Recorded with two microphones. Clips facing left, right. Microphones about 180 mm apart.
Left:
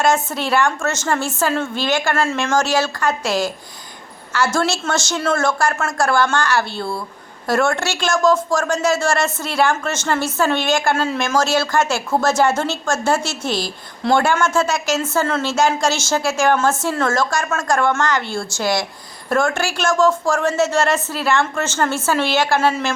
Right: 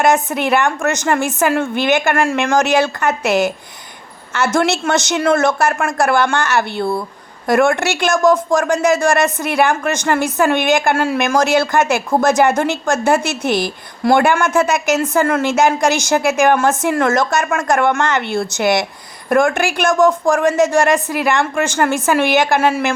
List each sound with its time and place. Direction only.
0.0 s a woman's voice: 15° right (ahead or behind)